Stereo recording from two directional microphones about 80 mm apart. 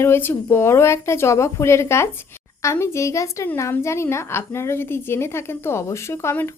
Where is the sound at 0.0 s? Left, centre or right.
Left.